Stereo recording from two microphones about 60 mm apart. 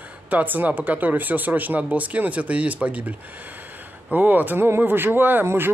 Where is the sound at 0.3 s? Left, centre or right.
Right.